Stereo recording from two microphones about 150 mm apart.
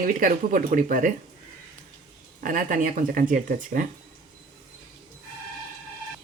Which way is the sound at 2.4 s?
65° right (ahead or behind).